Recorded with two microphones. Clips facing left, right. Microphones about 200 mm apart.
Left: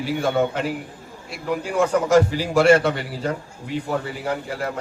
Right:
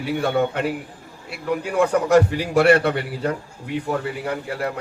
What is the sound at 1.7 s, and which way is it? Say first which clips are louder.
A man's voice: right 1 dB; 60° right (ahead or behind).